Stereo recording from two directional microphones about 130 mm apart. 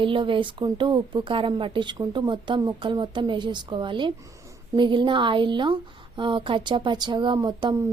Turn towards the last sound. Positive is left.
turn(degrees=-30)  # may be behind; listen again after turning